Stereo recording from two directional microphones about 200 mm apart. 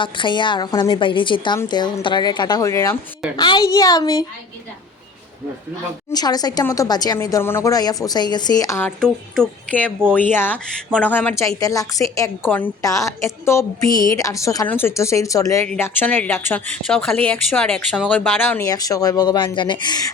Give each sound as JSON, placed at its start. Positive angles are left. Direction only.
{"t": 0.0, "sound": "speech", "side_deg": 25}
{"t": 6.1, "sound": "speech", "side_deg": 20}